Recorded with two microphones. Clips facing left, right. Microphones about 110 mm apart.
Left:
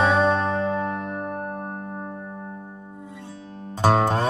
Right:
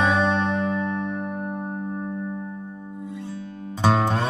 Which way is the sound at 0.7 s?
50° left (ahead or behind).